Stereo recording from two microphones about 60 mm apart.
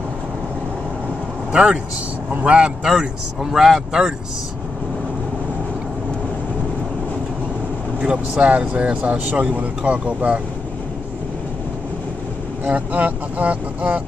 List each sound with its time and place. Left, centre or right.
1.5 s speech: centre
3.5 s speech: centre
8.0 s speech: centre
12.6 s speech: right